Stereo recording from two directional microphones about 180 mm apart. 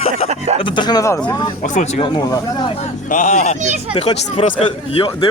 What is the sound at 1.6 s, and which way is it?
Speech, 40° left (ahead or behind).